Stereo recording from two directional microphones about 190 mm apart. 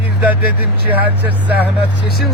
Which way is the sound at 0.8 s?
10° right (ahead or behind).